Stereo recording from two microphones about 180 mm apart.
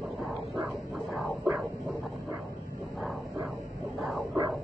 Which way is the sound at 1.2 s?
10° right (ahead or behind).